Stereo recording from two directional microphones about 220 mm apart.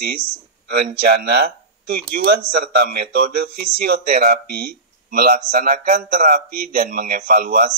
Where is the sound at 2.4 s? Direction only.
45° right (ahead or behind).